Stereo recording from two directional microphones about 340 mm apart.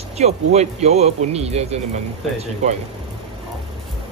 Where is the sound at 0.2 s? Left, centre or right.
Centre.